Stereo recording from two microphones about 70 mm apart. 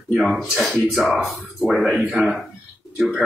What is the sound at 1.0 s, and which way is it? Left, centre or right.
Speech, centre.